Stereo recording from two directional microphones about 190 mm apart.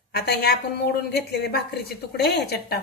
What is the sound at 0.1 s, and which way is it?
A woman's voice, 55° left (ahead or behind).